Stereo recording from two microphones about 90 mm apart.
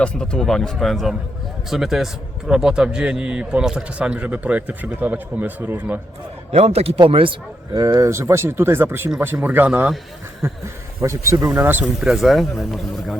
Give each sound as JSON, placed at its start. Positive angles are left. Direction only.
{"t": 0.0, "sound": "a man's voice", "side_deg": 10}
{"t": 6.8, "sound": "speech", "side_deg": -90}
{"t": 7.7, "sound": "speech", "side_deg": -45}
{"t": 10.4, "sound": "speech", "side_deg": -30}
{"t": 11.4, "sound": "speech", "side_deg": -20}
{"t": 11.9, "sound": "speech", "side_deg": 0}